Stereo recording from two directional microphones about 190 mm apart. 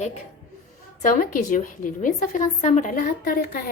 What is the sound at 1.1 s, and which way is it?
A woman's voice, 50° left (ahead or behind).